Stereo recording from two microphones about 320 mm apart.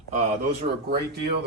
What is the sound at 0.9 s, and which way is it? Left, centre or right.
Speech, right.